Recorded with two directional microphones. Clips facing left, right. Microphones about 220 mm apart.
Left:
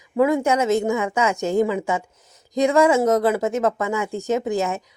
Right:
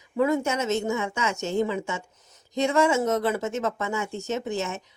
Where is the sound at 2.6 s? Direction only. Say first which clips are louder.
Left 5 dB; 90° left.